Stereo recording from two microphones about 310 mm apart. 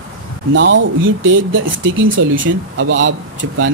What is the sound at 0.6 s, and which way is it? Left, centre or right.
Speech, right.